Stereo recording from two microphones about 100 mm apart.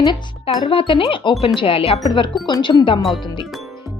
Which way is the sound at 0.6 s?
65° left (ahead or behind).